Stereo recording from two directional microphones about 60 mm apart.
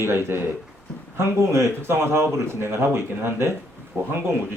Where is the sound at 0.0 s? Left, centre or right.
Right.